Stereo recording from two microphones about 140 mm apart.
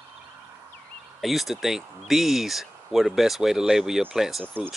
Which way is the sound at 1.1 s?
Centre (ahead or behind).